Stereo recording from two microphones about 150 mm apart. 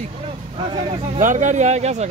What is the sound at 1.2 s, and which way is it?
Speech, 55° right (ahead or behind).